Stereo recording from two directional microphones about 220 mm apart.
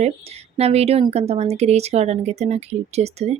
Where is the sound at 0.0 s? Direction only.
30° right (ahead or behind).